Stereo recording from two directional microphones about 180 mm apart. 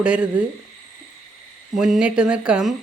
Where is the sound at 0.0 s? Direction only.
5° right (ahead or behind).